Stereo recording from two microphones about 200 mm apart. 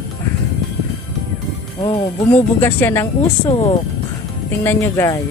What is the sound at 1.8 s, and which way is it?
Speech, 30° left (ahead or behind).